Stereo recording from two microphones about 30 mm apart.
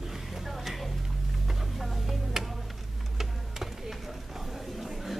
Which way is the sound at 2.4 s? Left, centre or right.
Centre.